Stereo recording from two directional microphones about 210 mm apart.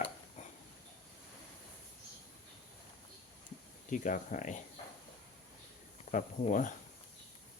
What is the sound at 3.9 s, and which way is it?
Speech, 40° left (ahead or behind).